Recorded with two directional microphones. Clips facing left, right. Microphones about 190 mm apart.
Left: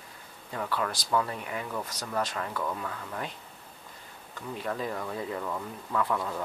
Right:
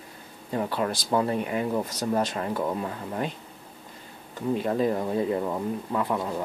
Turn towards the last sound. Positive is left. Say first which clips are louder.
# right 3 dB
turn(degrees=-20)  # may be behind; listen again after turning